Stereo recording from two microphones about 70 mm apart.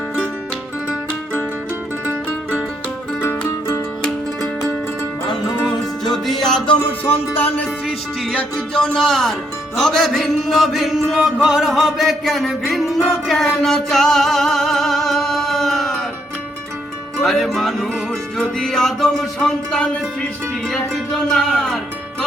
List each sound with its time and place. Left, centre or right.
6.1 s music: centre
6.7 s music: left
7.9 s music: centre
8.4 s music: centre
17.2 s music: centre